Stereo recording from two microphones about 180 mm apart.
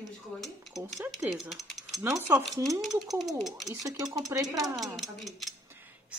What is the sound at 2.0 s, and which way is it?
Speech, 15° right (ahead or behind).